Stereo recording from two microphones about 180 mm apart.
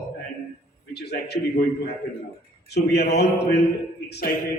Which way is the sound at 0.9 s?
65° left (ahead or behind).